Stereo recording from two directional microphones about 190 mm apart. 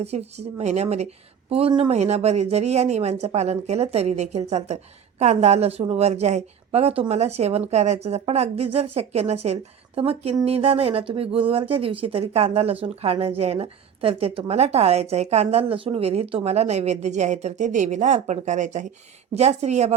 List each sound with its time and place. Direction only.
0.0 s speech: 35° right (ahead or behind)